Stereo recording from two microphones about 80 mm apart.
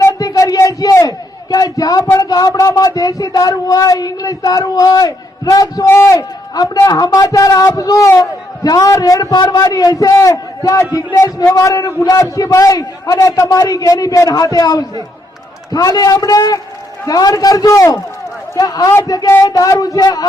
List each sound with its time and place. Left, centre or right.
0.0 s a sound: left
2.3 s speech: left
5.9 s a man's voice: left